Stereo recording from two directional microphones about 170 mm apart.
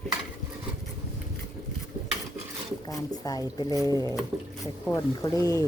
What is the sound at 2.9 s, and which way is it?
Speech, 20° left (ahead or behind).